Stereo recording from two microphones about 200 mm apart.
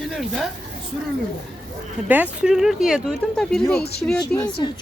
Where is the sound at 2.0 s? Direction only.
10° right (ahead or behind).